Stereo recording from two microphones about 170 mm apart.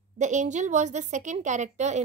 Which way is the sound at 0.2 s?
45° right (ahead or behind).